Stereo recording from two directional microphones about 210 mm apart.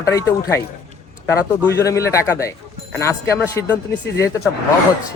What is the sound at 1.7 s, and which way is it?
Speech, 15° left (ahead or behind).